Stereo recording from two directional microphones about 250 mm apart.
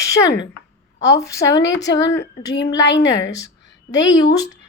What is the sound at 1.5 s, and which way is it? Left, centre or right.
Speech, left.